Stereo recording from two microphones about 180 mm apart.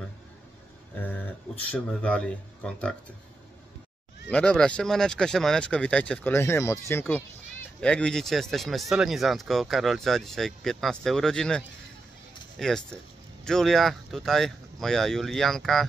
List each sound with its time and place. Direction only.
0.9 s speech: 10° left (ahead or behind)
4.3 s speech: 5° left (ahead or behind)